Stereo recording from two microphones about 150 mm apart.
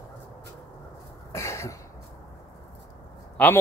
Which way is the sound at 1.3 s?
20° left (ahead or behind).